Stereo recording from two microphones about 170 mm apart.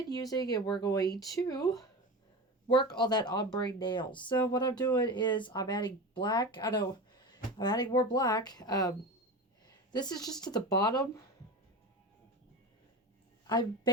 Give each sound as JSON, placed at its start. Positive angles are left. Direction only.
{"t": 0.1, "sound": "speech", "side_deg": 20}
{"t": 13.5, "sound": "speech", "side_deg": 25}